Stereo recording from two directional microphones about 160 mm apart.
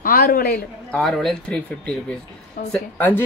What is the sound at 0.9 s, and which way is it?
Speech, centre (ahead or behind).